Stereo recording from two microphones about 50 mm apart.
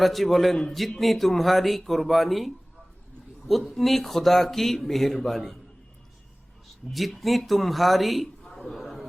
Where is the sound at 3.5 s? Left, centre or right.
Centre.